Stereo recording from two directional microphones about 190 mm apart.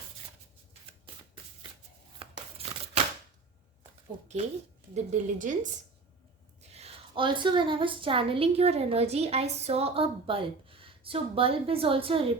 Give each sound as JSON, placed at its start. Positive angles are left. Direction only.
{"t": 2.1, "sound": "tearing", "side_deg": -30}
{"t": 4.9, "sound": "a woman's voice", "side_deg": -40}
{"t": 6.7, "sound": "a woman's voice", "side_deg": -30}